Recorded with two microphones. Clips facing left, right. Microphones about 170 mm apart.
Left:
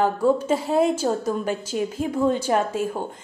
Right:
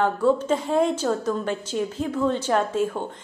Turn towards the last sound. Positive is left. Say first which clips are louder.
# even
turn(degrees=10)  # may be behind; listen again after turning